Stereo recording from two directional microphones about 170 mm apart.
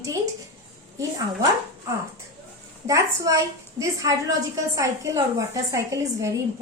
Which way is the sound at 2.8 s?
20° right (ahead or behind).